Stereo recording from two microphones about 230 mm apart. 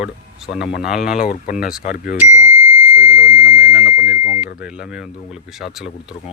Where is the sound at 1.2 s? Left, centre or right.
Left.